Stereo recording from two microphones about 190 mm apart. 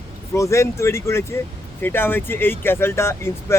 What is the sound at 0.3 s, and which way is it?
Speech, 15° left (ahead or behind).